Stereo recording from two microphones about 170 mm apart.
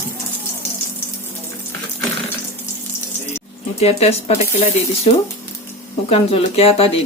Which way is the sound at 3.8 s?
40° left (ahead or behind).